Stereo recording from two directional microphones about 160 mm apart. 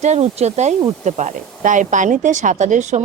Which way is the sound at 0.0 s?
45° right (ahead or behind).